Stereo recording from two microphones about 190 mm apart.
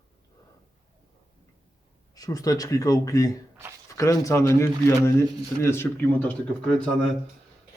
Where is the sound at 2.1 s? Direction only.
20° left (ahead or behind).